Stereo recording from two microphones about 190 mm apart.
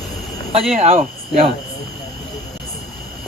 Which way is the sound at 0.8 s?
35° right (ahead or behind).